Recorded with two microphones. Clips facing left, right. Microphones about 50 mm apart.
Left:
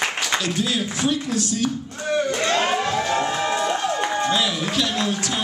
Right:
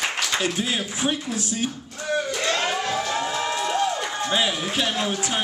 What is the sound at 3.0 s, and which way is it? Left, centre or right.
Music, left.